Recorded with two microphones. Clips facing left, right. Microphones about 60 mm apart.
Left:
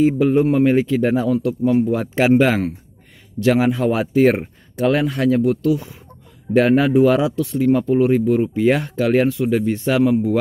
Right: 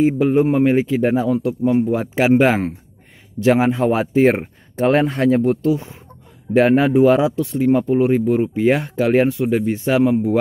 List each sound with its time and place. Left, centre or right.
0.0 s a man's voice: centre
4.7 s speech: right